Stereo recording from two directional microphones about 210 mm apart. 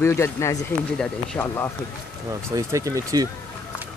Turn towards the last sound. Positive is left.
turn(degrees=-15)  # may be behind; listen again after turning